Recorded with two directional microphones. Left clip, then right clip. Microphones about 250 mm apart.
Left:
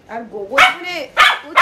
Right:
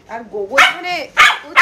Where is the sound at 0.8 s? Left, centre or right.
Centre.